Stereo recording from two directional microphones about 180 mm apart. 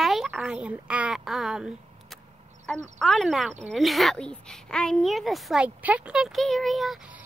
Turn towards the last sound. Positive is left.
turn(degrees=0)  # may be behind; listen again after turning